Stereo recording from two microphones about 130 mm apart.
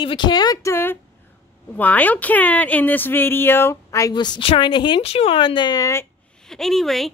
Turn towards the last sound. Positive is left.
turn(degrees=0)  # may be behind; listen again after turning